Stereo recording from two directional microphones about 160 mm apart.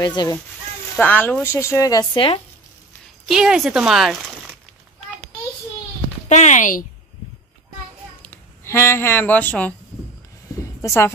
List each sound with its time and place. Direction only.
0.0 s speech: 25° left (ahead or behind)
0.9 s speech: 10° left (ahead or behind)
2.1 s speech: 35° left (ahead or behind)
3.3 s speech: 5° right (ahead or behind)
6.2 s speech: 50° left (ahead or behind)
8.2 s speech: 15° left (ahead or behind)
10.8 s a woman's voice: 15° left (ahead or behind)